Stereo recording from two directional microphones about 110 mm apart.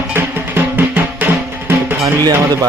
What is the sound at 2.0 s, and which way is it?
Music, 30° right (ahead or behind).